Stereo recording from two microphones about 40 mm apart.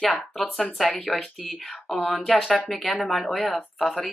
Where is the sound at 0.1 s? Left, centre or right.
Centre.